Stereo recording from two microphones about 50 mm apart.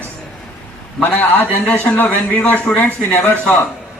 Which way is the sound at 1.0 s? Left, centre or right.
Left.